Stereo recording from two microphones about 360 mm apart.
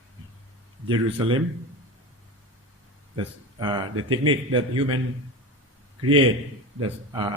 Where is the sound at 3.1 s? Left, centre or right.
Centre.